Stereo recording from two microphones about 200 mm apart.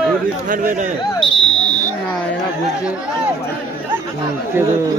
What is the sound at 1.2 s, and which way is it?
Smoke detector, 5° left (ahead or behind).